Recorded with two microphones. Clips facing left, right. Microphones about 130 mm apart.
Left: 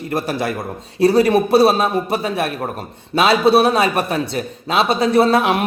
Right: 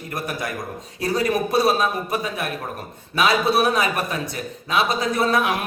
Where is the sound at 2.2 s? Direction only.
70° left (ahead or behind).